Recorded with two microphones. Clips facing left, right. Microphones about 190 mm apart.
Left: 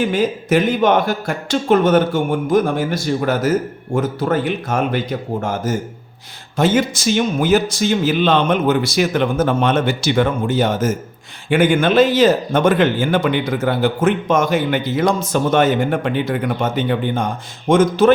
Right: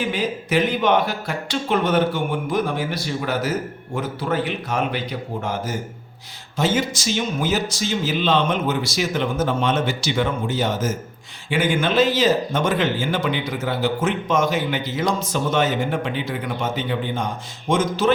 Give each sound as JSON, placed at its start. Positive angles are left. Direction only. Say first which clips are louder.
{"t": 0.0, "sound": "a man's voice", "louder": "left 6 dB", "side_deg": 45}